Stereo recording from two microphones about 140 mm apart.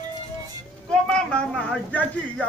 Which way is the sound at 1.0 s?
5° left (ahead or behind).